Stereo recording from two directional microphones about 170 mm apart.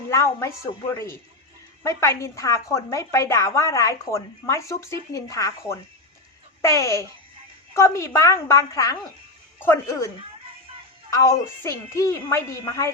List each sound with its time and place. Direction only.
0.1 s a woman's voice: 15° left (ahead or behind)
11.1 s a woman's voice: 15° left (ahead or behind)